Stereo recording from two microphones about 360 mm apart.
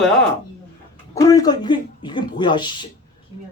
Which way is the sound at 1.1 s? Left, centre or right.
Centre.